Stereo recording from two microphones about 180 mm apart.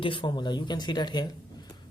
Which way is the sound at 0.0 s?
25° left (ahead or behind).